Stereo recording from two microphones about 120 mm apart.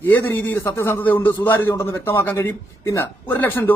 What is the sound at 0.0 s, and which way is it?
A man's voice, 15° left (ahead or behind).